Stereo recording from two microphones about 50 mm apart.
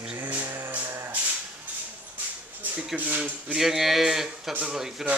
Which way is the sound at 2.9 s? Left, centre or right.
Right.